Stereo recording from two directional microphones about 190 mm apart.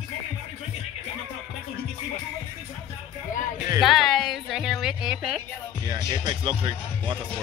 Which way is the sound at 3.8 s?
Centre (ahead or behind).